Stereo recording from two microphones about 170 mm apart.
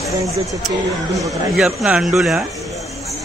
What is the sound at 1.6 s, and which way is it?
Speech, centre (ahead or behind).